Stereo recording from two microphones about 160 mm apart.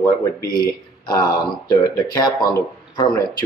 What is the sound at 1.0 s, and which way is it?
Speech, 25° left (ahead or behind).